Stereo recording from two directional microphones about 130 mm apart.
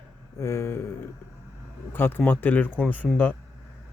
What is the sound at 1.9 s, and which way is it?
Speech, 15° left (ahead or behind).